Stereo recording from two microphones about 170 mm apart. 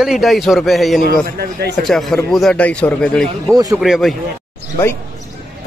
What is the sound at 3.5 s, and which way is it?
Speech, 20° right (ahead or behind).